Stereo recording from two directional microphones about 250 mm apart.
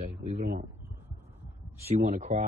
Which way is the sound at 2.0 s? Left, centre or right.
Right.